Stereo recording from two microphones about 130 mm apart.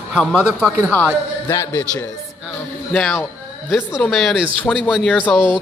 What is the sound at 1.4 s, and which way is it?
Speech, 20° left (ahead or behind).